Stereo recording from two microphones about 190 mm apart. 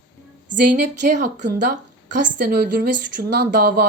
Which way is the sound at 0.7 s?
40° right (ahead or behind).